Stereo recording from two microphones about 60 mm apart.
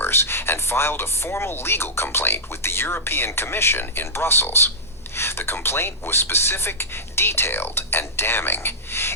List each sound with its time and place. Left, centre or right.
0.0 s speech: left